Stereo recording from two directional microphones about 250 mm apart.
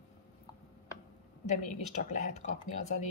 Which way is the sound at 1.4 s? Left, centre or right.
Left.